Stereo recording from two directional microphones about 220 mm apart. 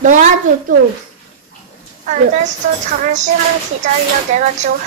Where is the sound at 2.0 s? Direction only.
35° right (ahead or behind).